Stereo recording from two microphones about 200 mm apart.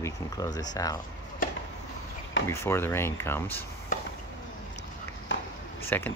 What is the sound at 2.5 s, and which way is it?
Speech, 15° left (ahead or behind).